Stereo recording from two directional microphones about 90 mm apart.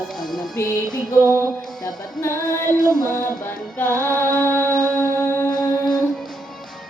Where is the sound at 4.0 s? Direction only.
35° right (ahead or behind).